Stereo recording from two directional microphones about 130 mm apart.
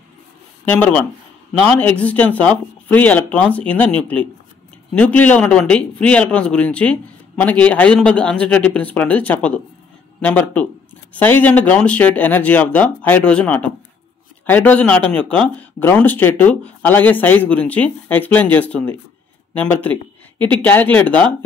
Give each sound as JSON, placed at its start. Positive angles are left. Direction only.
{"t": 0.7, "sound": "speech", "side_deg": 10}